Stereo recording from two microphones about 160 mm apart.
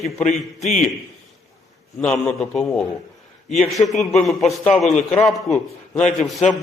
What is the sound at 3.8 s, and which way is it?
A man's voice, centre (ahead or behind).